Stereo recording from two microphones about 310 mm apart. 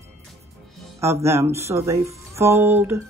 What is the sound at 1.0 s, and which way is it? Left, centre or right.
Speech, centre.